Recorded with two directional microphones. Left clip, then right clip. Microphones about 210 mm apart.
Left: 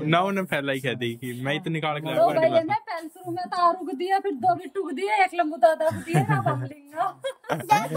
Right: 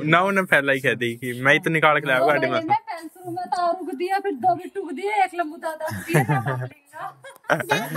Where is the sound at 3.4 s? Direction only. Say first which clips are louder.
Left 1 dB; 15° left (ahead or behind).